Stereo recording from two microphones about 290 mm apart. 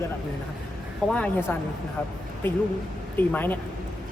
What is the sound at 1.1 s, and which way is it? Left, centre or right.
Speech, centre.